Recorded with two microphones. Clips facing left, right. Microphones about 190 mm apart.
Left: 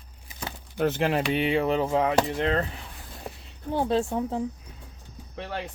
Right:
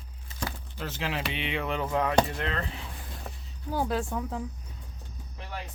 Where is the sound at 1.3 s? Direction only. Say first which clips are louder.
Left 8 dB; 40° left (ahead or behind).